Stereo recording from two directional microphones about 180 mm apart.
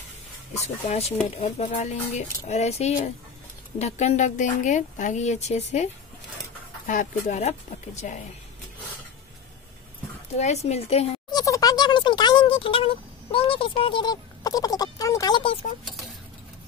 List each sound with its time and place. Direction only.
0.8 s speech: 35° left (ahead or behind)
6.9 s speech: 45° left (ahead or behind)
10.4 s speech: 35° left (ahead or behind)
11.2 s a sound: 20° left (ahead or behind)
15.8 s dishes: centre (ahead or behind)